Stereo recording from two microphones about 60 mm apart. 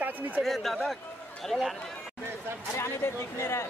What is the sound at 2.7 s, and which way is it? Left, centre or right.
Speech, left.